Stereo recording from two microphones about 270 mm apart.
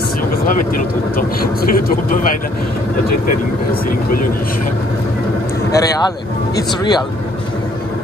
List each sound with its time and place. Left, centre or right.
0.5 s speech: left
5.7 s speech: centre